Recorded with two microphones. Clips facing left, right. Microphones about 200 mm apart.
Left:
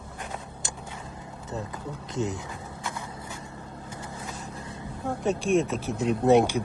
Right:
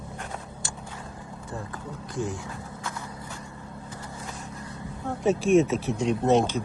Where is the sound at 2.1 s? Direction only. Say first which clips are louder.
Left 1 dB; 20° left (ahead or behind).